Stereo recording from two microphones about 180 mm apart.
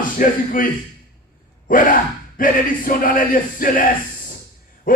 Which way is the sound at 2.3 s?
50° left (ahead or behind).